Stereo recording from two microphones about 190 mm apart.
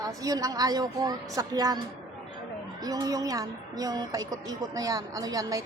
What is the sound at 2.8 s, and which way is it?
Speech, 20° right (ahead or behind).